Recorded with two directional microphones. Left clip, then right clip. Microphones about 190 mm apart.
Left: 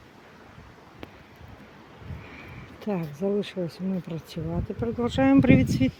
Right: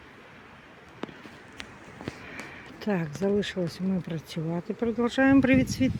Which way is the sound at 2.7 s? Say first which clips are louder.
Right 1 dB; 5° right (ahead or behind).